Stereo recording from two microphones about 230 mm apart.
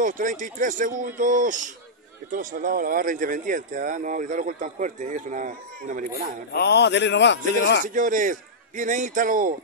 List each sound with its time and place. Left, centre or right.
0.0 s speech: right
6.5 s a man's voice: left
7.8 s speech: right